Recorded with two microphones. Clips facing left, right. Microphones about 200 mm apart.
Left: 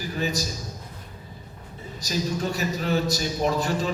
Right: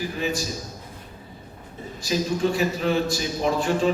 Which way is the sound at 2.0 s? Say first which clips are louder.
Right 4 dB; 40° left (ahead or behind).